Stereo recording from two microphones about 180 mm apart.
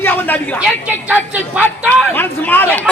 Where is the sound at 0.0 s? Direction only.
10° left (ahead or behind).